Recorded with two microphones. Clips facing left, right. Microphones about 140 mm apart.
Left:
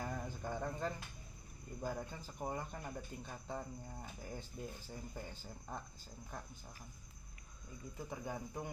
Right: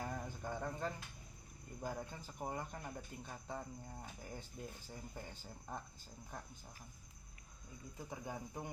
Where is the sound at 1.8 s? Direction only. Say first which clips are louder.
Left 2 dB; 15° right (ahead or behind).